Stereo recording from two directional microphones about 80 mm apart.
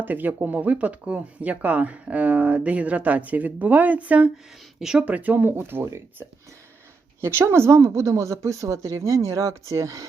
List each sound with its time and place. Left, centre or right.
0.0 s speech: right
4.8 s speech: centre
5.0 s speech: right